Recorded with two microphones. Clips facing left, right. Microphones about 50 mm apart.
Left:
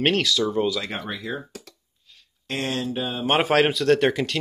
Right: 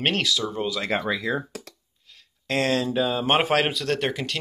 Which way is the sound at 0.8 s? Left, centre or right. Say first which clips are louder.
Right 5 dB; right.